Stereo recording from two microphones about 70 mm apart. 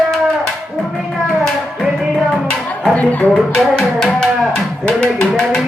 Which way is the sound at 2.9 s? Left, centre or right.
Left.